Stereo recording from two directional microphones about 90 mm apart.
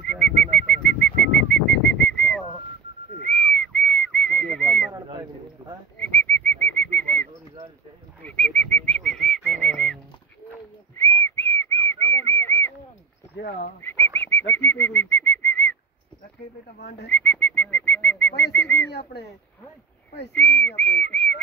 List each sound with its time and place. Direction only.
0.1 s bird: 10° left (ahead or behind)
3.3 s whistling: 10° left (ahead or behind)
4.9 s bird: 50° right (ahead or behind)
5.9 s bird: 15° left (ahead or behind)
11.0 s whistling: 25° left (ahead or behind)
13.8 s bird: 25° left (ahead or behind)
17.1 s bird: 15° left (ahead or behind)
20.3 s whistling: 15° left (ahead or behind)